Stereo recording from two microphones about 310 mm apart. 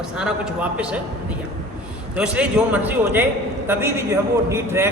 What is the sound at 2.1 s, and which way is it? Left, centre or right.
A man's voice, centre.